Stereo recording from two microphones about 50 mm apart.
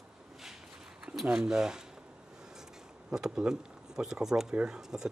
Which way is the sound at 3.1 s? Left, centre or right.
Centre.